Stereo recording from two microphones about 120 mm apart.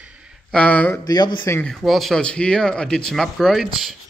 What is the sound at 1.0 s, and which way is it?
Speech, 35° left (ahead or behind).